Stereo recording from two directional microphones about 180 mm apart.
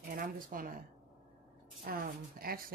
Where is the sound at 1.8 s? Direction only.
55° right (ahead or behind).